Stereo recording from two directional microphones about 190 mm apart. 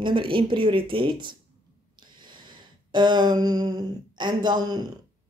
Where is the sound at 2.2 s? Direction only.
25° right (ahead or behind).